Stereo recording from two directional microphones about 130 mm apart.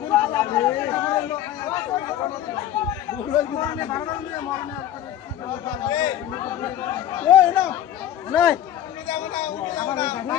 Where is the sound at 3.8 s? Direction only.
30° left (ahead or behind).